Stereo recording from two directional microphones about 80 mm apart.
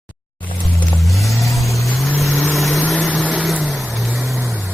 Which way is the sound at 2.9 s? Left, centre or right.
Centre.